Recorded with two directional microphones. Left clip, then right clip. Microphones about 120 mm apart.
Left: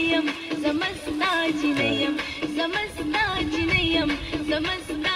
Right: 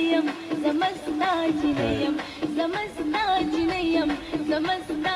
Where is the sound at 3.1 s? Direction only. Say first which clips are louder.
Right 1 dB; 40° left (ahead or behind).